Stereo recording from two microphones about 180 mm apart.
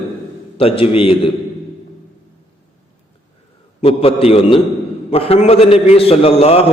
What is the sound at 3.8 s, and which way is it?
A man's voice, 35° left (ahead or behind).